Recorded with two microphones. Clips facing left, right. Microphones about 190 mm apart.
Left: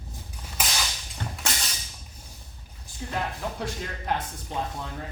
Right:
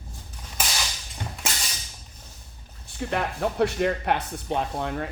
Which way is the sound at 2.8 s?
65° right (ahead or behind).